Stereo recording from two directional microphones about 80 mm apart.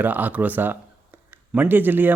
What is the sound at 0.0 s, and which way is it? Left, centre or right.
A man's voice, right.